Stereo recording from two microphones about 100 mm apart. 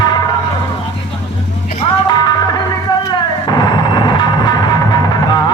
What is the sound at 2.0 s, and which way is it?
Music, 45° left (ahead or behind).